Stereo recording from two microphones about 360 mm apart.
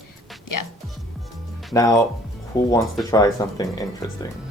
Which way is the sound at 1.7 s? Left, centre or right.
Centre.